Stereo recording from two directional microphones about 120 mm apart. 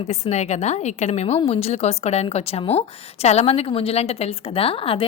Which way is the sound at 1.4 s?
55° left (ahead or behind).